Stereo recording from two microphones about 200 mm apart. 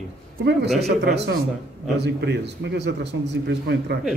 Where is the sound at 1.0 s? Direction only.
60° right (ahead or behind).